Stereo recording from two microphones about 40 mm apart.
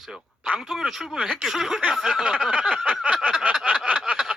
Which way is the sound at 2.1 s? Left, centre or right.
Centre.